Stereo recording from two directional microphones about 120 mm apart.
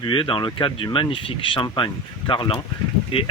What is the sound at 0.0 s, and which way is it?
Speech, 45° left (ahead or behind).